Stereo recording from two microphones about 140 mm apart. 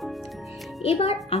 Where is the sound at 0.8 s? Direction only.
45° left (ahead or behind).